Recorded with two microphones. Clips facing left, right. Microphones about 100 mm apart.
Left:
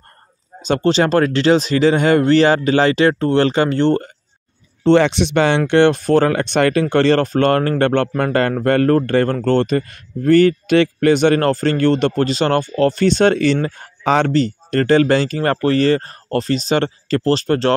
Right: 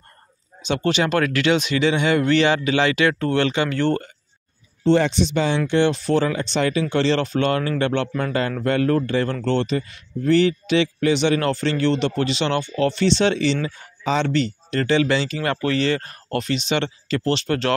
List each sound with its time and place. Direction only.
0.6 s speech: 35° left (ahead or behind)
4.8 s speech: 75° left (ahead or behind); by 14.3 s 55° left (ahead or behind)
14.3 s speech: 45° left (ahead or behind)